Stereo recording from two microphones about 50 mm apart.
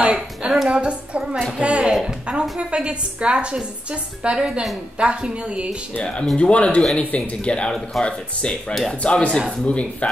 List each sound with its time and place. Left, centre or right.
0.0 s a sound: centre
0.7 s a woman's voice: right
6.3 s speech: left